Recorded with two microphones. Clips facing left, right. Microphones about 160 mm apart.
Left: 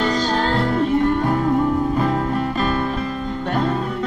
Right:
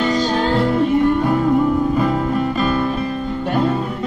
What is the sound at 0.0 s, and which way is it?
Music, 5° right (ahead or behind).